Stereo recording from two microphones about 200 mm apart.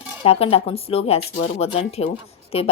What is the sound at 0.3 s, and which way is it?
A woman's voice, 30° left (ahead or behind).